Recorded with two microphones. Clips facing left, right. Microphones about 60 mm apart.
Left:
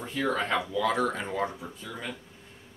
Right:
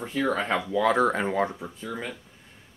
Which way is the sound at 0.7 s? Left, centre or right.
Right.